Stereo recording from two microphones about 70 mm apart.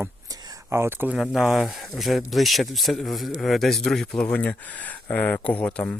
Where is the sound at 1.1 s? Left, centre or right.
Centre.